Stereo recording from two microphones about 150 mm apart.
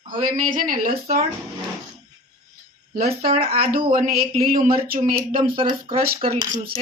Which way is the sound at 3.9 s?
65° right (ahead or behind).